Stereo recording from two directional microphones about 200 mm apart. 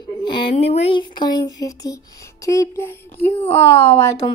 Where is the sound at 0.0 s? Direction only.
20° left (ahead or behind).